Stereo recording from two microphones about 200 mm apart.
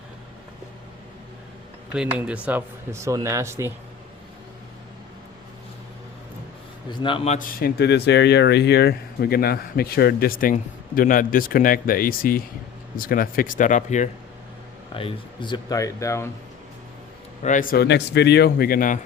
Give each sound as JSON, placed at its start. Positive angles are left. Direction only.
{"t": 1.9, "sound": "speech", "side_deg": -5}
{"t": 7.0, "sound": "a man's voice", "side_deg": 25}
{"t": 7.3, "sound": "speech", "side_deg": 45}
{"t": 14.9, "sound": "speech", "side_deg": 25}
{"t": 17.4, "sound": "speech", "side_deg": 40}